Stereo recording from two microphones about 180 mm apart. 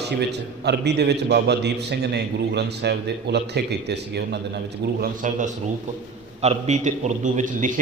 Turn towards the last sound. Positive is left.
turn(degrees=-45)  # may be behind; listen again after turning